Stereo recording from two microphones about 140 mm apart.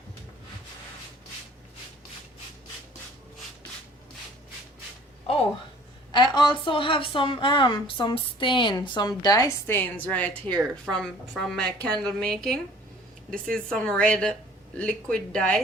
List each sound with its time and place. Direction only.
6.1 s a woman's voice: 30° left (ahead or behind); by 15.6 s 5° left (ahead or behind)